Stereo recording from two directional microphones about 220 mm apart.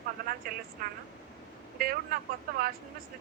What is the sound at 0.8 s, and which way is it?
Speech, 40° right (ahead or behind).